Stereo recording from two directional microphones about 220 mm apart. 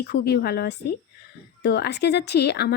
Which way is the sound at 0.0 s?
45° left (ahead or behind).